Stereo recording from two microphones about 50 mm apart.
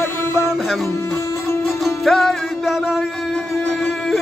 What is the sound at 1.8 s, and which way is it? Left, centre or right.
Music, centre.